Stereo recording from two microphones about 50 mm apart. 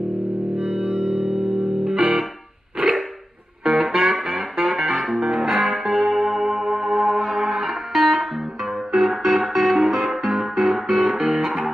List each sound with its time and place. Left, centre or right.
0.6 s music: right
3.6 s music: centre